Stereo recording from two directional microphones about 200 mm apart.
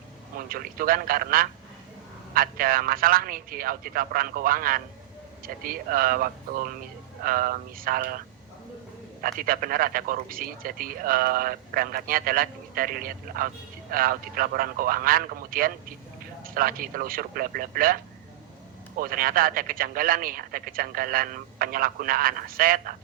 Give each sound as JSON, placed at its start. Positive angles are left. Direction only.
{"t": 0.3, "sound": "a man's voice", "side_deg": -45}
{"t": 9.2, "sound": "a man's voice", "side_deg": -45}